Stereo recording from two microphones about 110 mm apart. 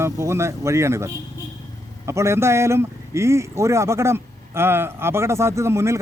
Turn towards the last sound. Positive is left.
turn(degrees=-25)  # may be behind; listen again after turning